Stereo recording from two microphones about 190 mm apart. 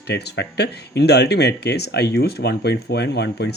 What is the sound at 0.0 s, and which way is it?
Speech, 60° left (ahead or behind).